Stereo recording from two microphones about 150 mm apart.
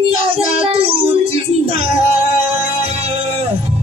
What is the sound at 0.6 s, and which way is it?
Child singing, 40° right (ahead or behind).